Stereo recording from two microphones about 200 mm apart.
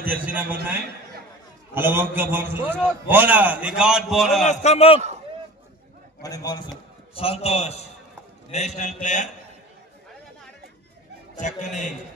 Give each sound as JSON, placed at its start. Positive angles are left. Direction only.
{"t": 0.0, "sound": "a man's voice", "side_deg": -10}
{"t": 1.7, "sound": "a man's voice", "side_deg": -10}
{"t": 4.5, "sound": "a man's voice", "side_deg": 35}
{"t": 6.2, "sound": "a man's voice", "side_deg": 20}
{"t": 7.2, "sound": "a man's voice", "side_deg": 30}
{"t": 11.3, "sound": "a man's voice", "side_deg": 40}